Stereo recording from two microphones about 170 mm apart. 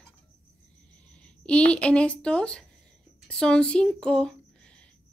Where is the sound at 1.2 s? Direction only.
5° left (ahead or behind).